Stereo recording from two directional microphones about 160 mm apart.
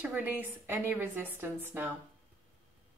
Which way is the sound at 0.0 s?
10° right (ahead or behind).